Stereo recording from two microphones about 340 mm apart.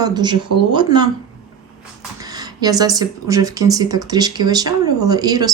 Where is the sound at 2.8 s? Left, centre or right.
Centre.